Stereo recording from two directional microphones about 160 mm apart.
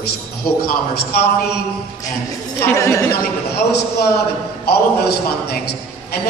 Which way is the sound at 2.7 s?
20° left (ahead or behind).